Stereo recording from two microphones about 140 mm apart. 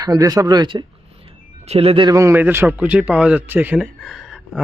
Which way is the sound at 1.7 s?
45° right (ahead or behind).